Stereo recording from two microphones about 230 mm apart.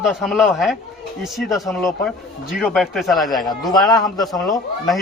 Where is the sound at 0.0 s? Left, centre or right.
Centre.